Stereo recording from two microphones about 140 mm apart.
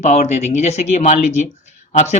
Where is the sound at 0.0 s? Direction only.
55° left (ahead or behind).